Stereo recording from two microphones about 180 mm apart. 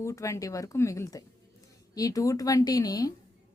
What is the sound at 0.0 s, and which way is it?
A woman's voice, 15° left (ahead or behind).